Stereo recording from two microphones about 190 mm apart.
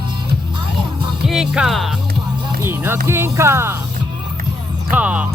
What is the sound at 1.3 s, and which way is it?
Speech, 5° right (ahead or behind).